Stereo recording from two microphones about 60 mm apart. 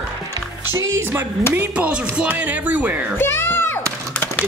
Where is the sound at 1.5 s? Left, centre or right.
Right.